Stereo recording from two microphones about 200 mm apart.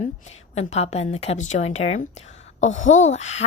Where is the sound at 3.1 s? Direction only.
35° left (ahead or behind).